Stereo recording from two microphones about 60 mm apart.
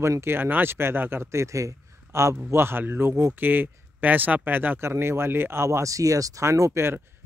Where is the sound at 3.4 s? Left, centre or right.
Right.